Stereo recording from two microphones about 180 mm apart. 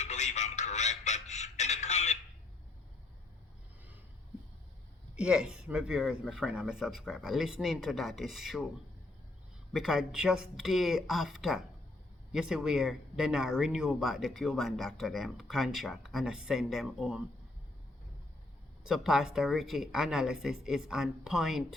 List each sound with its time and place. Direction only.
0.0 s a sound: 40° left (ahead or behind)
5.1 s speech: 5° right (ahead or behind)
9.7 s speech: centre (ahead or behind)
18.8 s speech: 5° right (ahead or behind)